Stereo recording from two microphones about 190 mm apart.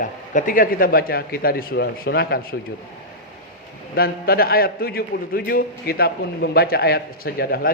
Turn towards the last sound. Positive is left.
turn(degrees=55)  # may be behind; listen again after turning